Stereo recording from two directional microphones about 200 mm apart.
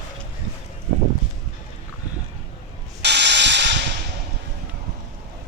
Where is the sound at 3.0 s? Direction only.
60° right (ahead or behind).